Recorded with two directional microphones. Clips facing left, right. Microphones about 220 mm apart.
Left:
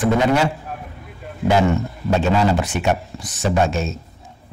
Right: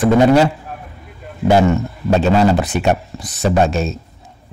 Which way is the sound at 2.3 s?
35° right (ahead or behind).